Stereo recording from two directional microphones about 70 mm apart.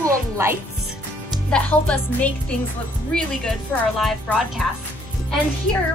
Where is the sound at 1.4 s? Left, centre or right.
Centre.